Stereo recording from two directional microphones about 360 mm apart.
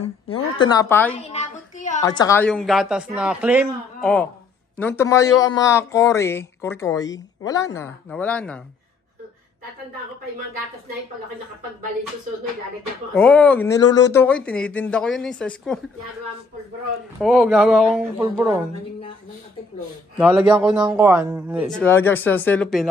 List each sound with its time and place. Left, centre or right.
0.0 s speech: centre
1.3 s a sound: centre
2.0 s speech: centre
13.1 s speech: centre
17.2 s speech: centre
20.2 s speech: centre